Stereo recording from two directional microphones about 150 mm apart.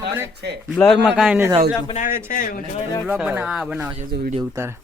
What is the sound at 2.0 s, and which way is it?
Speech, 65° left (ahead or behind).